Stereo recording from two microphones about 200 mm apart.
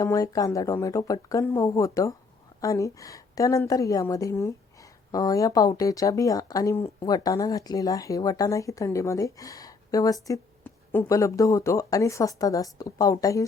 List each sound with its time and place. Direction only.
0.0 s a woman's voice: 15° left (ahead or behind)